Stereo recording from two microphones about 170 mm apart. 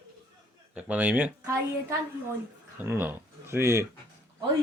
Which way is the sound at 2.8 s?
10° right (ahead or behind).